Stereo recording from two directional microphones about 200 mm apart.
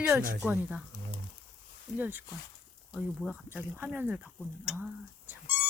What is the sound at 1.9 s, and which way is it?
Speech, 10° right (ahead or behind).